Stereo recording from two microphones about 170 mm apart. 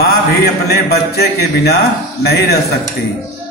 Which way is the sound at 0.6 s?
70° left (ahead or behind).